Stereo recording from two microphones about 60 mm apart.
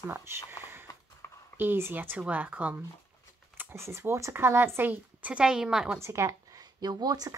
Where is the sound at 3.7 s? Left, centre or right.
Right.